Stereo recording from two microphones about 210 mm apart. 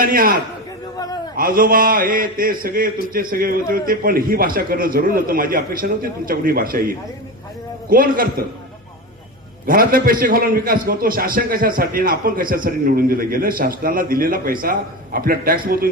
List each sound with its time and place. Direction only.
0.0 s a man's voice: 40° right (ahead or behind)
0.9 s a sound: 20° left (ahead or behind)
1.4 s a man's voice: 45° right (ahead or behind)
9.6 s a man's voice: 45° right (ahead or behind)